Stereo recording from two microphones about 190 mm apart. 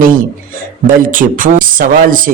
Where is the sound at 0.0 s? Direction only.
45° right (ahead or behind).